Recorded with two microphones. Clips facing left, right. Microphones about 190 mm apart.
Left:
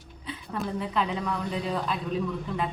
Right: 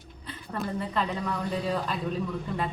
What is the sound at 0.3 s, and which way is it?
Speech, centre (ahead or behind).